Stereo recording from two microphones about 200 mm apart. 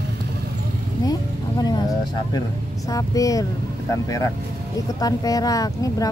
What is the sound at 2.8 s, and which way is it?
Speech, 15° left (ahead or behind).